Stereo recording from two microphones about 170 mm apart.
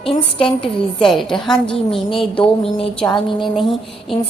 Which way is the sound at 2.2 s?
30° left (ahead or behind).